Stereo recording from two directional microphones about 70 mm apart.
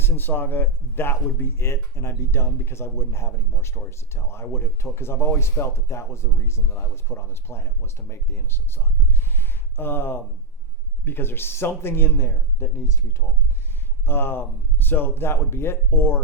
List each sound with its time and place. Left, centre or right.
0.0 s speech: left
9.3 s a sound: left
11.0 s speech: left
14.0 s speech: left